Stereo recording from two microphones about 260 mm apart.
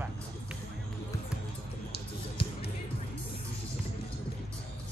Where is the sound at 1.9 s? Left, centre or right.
Left.